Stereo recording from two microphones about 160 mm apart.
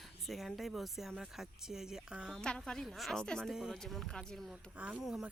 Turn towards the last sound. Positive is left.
turn(degrees=0)  # may be behind; listen again after turning